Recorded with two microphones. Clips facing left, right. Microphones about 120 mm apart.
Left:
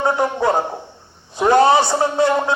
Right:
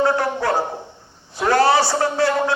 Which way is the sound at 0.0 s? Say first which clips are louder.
Left 1 dB; 20° left (ahead or behind).